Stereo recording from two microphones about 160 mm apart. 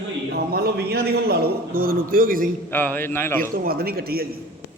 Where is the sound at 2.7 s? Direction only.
10° left (ahead or behind).